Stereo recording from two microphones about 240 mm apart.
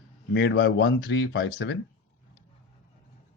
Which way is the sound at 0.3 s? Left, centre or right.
Left.